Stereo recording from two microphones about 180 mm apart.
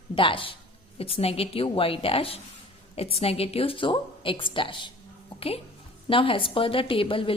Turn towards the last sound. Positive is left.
turn(degrees=30)  # may be behind; listen again after turning